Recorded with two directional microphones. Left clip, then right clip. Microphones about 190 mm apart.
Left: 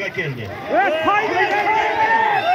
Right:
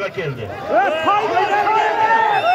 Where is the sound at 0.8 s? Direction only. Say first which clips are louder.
Right 1 dB; 35° left (ahead or behind).